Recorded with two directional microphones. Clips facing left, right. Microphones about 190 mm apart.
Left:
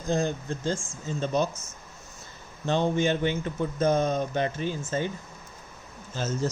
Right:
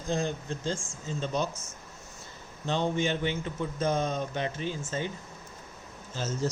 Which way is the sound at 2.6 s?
50° left (ahead or behind).